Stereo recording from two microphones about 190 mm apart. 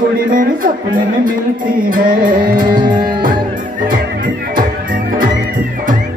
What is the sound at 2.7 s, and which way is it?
Music, 25° right (ahead or behind).